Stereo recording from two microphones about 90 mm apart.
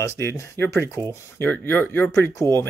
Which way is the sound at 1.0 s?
40° right (ahead or behind).